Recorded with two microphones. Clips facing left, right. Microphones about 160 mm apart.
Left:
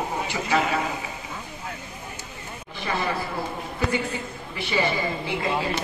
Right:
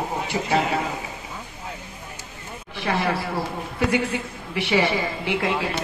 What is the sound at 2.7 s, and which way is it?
Speech, 80° right.